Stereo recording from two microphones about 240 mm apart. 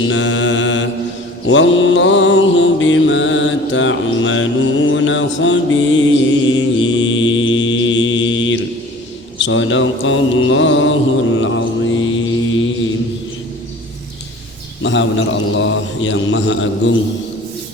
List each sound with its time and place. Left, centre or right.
0.0 s mantra: left
9.4 s a man's voice: left
11.3 s mantra: left
14.8 s a man's voice: left